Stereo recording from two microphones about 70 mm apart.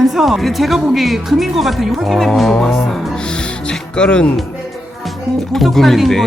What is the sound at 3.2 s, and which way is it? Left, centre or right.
Music, centre.